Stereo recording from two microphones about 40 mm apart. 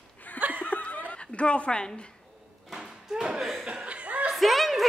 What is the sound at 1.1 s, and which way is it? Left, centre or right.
Speech, left.